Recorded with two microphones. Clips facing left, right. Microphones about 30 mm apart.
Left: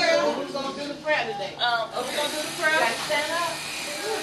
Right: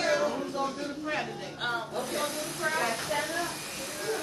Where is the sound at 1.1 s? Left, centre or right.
Left.